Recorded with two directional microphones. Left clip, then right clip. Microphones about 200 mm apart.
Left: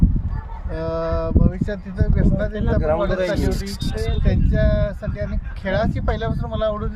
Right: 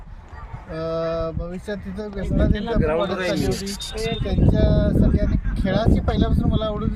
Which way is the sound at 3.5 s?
60° left (ahead or behind).